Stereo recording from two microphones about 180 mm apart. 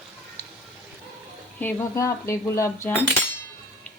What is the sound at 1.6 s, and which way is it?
A woman's voice, 15° left (ahead or behind).